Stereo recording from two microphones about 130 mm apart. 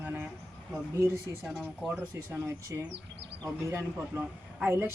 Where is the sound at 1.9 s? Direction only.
20° right (ahead or behind).